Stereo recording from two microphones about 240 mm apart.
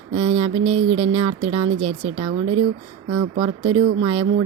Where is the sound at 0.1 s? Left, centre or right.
Right.